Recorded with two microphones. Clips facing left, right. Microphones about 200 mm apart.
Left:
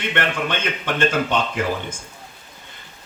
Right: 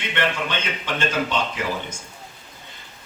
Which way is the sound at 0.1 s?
55° left (ahead or behind).